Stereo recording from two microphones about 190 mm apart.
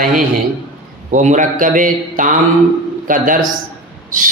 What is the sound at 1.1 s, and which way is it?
Speech, 40° right (ahead or behind).